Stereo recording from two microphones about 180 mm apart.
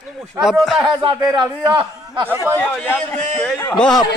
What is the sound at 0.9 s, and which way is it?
Speech, 25° right (ahead or behind).